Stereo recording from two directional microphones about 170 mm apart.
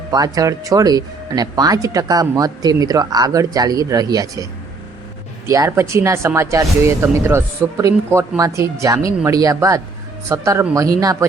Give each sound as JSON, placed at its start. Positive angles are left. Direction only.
{"t": 0.1, "sound": "speech", "side_deg": -20}
{"t": 5.5, "sound": "speech", "side_deg": -15}